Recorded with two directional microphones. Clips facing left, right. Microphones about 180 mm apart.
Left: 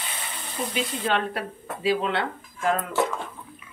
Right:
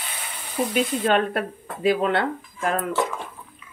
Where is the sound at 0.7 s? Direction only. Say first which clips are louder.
Right 5 dB; 50° right (ahead or behind).